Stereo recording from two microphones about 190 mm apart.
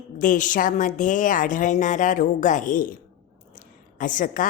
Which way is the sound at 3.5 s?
45° left (ahead or behind).